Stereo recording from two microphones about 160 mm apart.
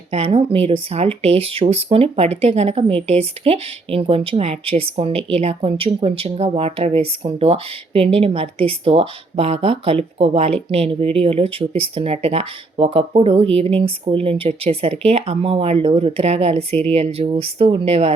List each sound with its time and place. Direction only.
0.1 s speech: 35° right (ahead or behind)